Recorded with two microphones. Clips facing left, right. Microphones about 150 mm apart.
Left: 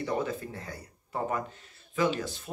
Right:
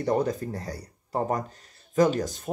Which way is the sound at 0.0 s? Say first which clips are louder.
Right 6 dB; 40° right (ahead or behind).